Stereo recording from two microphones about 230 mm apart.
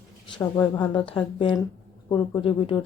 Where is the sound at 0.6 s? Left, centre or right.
Centre.